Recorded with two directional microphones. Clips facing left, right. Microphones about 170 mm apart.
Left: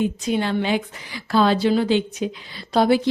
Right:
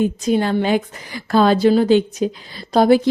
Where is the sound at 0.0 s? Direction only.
45° right (ahead or behind).